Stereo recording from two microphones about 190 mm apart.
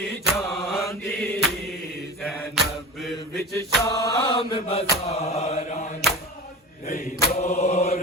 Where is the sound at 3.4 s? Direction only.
15° left (ahead or behind); by 5.9 s 35° left (ahead or behind).